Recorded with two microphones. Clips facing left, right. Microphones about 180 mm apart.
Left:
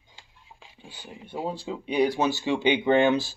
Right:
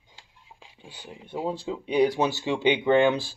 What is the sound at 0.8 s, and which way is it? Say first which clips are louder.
Speech: even; 5° left (ahead or behind).